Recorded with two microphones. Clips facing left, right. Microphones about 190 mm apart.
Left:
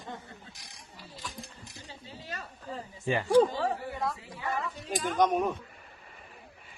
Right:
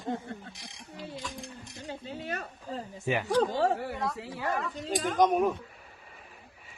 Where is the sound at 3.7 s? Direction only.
75° right (ahead or behind).